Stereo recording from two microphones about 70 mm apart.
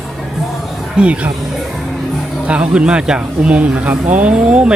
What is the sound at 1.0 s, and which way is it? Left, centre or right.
Speech, centre.